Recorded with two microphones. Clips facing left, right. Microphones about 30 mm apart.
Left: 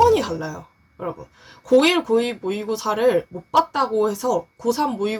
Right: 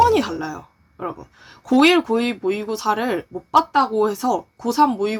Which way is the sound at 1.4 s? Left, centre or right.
Centre.